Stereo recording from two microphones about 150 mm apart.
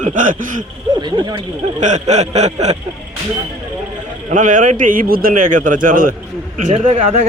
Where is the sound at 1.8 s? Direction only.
50° right (ahead or behind).